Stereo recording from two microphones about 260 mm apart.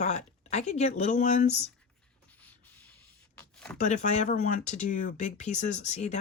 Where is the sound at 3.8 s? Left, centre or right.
Left.